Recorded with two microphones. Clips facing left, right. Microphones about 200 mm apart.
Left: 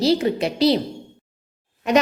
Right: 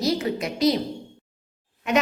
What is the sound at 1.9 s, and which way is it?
Speech, 35° left (ahead or behind).